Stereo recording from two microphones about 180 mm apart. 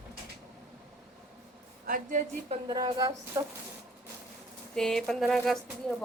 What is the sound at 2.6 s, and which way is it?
Speech, 20° right (ahead or behind).